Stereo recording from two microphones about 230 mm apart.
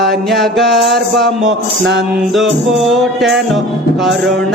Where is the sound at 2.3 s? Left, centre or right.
Centre.